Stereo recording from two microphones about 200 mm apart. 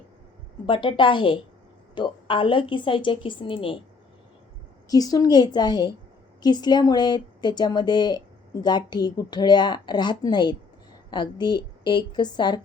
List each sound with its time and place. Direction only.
0.6 s a woman's voice: 25° left (ahead or behind)
4.9 s a woman's voice: 20° left (ahead or behind)